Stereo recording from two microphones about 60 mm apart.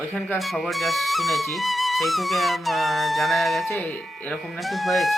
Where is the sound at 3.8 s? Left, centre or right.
Left.